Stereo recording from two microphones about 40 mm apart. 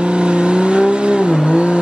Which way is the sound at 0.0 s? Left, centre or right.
Right.